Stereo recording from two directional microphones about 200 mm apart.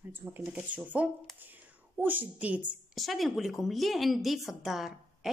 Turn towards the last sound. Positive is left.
turn(degrees=0)  # may be behind; listen again after turning